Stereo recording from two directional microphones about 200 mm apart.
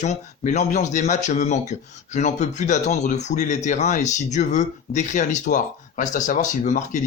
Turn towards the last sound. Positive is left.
turn(degrees=40)  # may be behind; listen again after turning